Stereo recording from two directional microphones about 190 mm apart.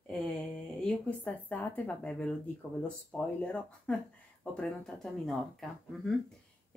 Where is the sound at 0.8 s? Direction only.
5° left (ahead or behind).